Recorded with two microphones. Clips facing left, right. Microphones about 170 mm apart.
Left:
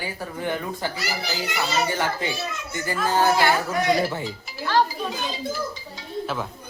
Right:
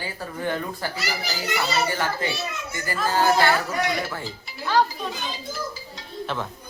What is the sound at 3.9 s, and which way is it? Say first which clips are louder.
Speech: left 5 dB; 30° left (ahead or behind).